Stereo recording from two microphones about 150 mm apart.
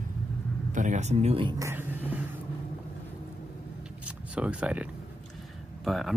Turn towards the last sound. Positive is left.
turn(degrees=0)  # may be behind; listen again after turning